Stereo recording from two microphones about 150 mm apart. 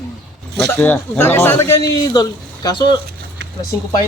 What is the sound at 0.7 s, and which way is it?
A man's voice, 15° left (ahead or behind).